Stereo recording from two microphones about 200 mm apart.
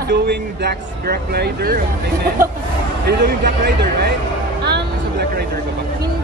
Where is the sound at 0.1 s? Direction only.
55° right (ahead or behind).